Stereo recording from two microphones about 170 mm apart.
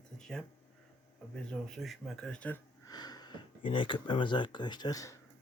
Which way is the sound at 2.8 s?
25° left (ahead or behind).